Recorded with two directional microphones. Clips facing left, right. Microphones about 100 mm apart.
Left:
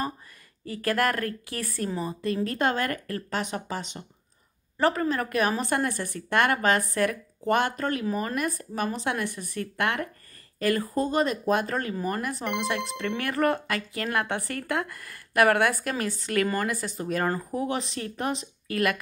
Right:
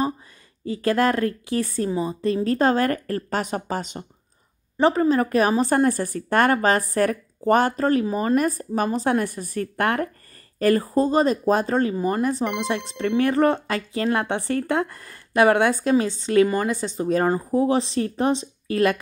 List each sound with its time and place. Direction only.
0.7 s speech: 25° right (ahead or behind)
1.9 s a woman's voice: 15° right (ahead or behind)
2.2 s a woman's voice: 30° right (ahead or behind)
4.7 s a woman's voice: 25° right (ahead or behind)